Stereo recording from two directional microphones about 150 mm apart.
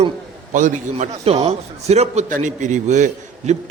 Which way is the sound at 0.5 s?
55° right (ahead or behind).